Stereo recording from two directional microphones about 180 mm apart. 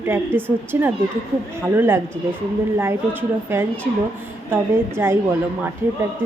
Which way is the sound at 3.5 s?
10° right (ahead or behind).